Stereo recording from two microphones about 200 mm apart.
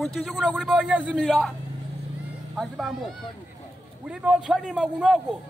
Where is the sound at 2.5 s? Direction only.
Centre (ahead or behind).